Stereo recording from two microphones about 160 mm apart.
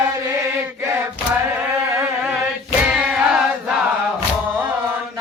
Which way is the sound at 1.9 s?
10° right (ahead or behind).